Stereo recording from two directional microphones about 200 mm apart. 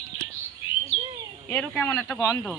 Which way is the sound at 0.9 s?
80° left.